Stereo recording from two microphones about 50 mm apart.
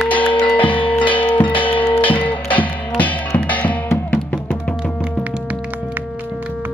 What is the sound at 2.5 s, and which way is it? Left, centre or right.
Music, left.